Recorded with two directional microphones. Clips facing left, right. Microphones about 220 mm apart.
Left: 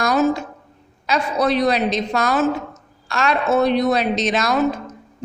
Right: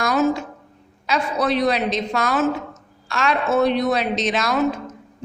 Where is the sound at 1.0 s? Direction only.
40° left (ahead or behind).